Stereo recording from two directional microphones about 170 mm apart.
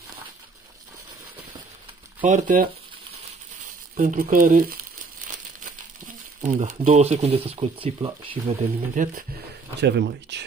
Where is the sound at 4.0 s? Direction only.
50° right (ahead or behind).